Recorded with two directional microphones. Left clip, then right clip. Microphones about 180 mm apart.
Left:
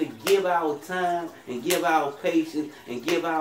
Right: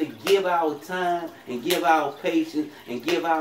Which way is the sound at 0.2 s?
10° left (ahead or behind).